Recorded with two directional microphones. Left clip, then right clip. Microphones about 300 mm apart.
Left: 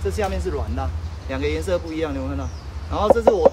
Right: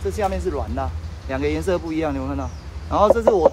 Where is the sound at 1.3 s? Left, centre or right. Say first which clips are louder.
Right 1 dB; centre.